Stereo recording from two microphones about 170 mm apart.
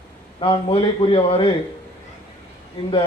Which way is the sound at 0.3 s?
30° left (ahead or behind).